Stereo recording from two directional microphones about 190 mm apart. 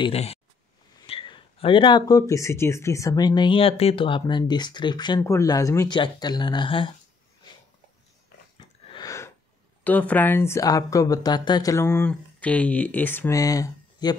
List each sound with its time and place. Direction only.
0.0 s speech: 30° left (ahead or behind)
8.5 s a sound: 20° left (ahead or behind)
9.8 s speech: 10° left (ahead or behind)